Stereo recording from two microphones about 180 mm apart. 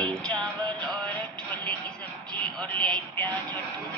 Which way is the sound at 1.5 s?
10° left (ahead or behind).